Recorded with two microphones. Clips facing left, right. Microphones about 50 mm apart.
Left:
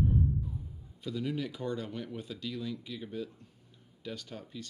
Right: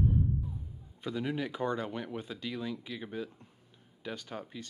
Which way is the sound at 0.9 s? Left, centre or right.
Right.